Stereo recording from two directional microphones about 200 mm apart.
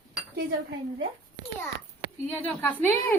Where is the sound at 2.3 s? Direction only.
10° left (ahead or behind).